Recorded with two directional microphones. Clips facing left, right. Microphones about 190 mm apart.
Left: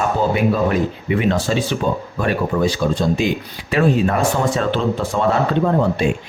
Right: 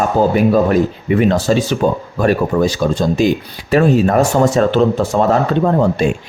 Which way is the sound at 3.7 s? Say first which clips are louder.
Right 5 dB; 40° right (ahead or behind).